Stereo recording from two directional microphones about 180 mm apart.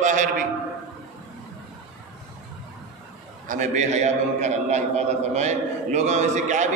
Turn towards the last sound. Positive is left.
turn(degrees=-40)  # may be behind; listen again after turning